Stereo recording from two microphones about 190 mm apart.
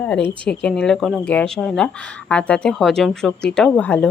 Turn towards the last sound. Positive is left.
turn(degrees=5)  # may be behind; listen again after turning